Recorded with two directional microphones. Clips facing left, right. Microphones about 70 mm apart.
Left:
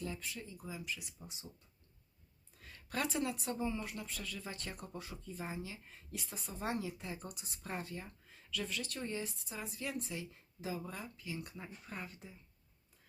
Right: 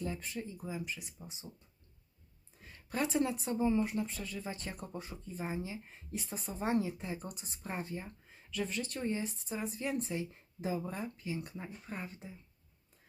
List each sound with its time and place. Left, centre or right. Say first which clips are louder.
0.0 s speech: right 4 dB; right
2.6 s a woman's voice: right 3 dB; right